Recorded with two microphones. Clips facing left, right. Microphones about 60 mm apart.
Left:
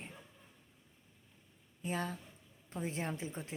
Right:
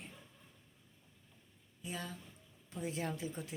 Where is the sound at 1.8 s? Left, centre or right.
Left.